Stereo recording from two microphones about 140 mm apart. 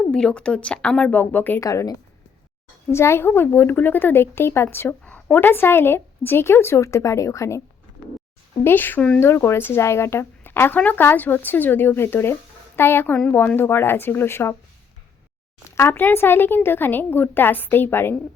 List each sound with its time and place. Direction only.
0.0 s a woman's voice: 5° left (ahead or behind)
1.6 s a woman's voice: 25° left (ahead or behind)
8.6 s a woman's voice: 15° left (ahead or behind)
15.7 s a woman's voice: 15° left (ahead or behind)